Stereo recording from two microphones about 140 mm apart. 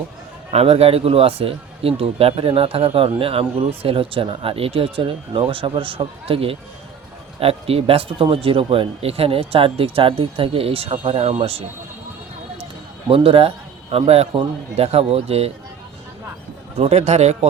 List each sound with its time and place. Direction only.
0.5 s a man's voice: 45° right (ahead or behind)
13.1 s a man's voice: 40° right (ahead or behind)
16.7 s a man's voice: 50° right (ahead or behind)